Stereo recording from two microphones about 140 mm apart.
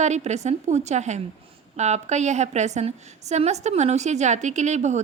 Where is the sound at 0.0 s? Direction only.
55° right (ahead or behind).